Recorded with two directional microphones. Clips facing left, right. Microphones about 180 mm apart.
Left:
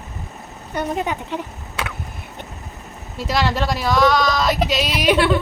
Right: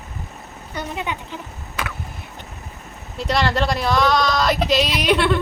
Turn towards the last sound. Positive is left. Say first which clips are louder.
# left 2 dB
turn(degrees=0)  # may be behind; listen again after turning